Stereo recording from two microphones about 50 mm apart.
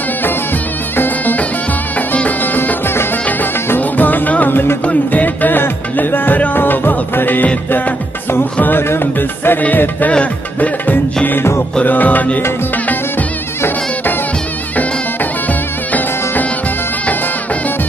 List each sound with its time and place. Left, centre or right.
0.9 s music: left
8.5 s music: left
8.8 s music: left
9.6 s music: left
11.8 s music: left